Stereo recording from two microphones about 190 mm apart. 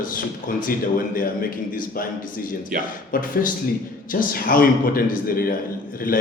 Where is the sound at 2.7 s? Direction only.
50° right (ahead or behind).